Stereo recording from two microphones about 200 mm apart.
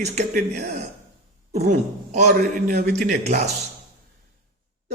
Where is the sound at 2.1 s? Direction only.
40° right (ahead or behind).